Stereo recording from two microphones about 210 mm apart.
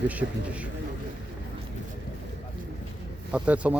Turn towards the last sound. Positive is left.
turn(degrees=-5)  # may be behind; listen again after turning